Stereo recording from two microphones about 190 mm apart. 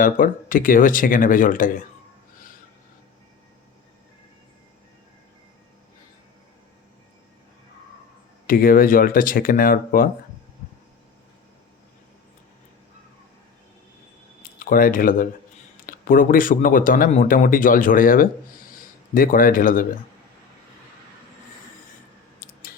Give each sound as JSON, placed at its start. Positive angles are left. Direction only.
{"t": 0.0, "sound": "speech", "side_deg": 45}
{"t": 8.4, "sound": "speech", "side_deg": 50}
{"t": 14.6, "sound": "speech", "side_deg": 50}
{"t": 22.4, "sound": "a sound", "side_deg": 50}